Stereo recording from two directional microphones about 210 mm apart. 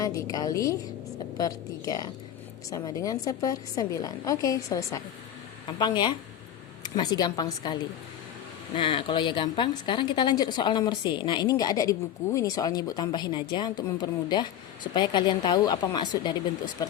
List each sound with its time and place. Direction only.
0.0 s a woman's voice: 15° left (ahead or behind)